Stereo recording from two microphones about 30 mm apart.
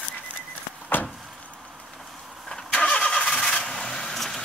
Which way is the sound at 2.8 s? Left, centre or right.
Left.